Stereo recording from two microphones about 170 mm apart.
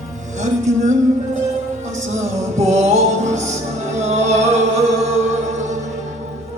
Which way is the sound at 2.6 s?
40° right (ahead or behind).